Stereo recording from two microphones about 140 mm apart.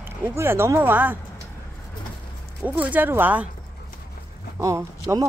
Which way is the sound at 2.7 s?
10° right (ahead or behind).